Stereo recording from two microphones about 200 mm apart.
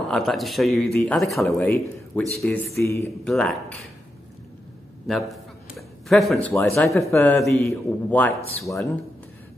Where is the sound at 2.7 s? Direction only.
50° left (ahead or behind).